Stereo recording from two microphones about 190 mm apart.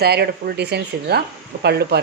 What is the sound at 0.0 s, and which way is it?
A woman's voice, 60° right (ahead or behind).